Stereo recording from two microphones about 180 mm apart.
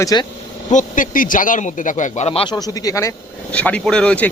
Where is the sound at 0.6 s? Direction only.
45° left (ahead or behind).